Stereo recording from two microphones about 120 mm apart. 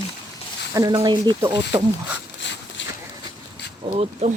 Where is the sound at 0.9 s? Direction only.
40° right (ahead or behind).